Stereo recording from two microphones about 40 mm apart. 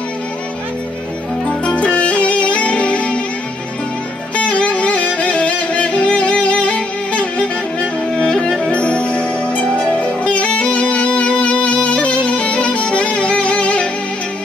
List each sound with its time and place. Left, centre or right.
1.5 s music: left
4.4 s music: left